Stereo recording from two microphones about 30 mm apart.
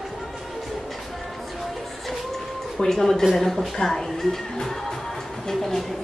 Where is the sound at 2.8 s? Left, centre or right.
Centre.